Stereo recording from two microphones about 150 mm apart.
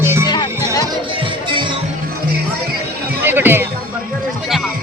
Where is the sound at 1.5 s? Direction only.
35° right (ahead or behind).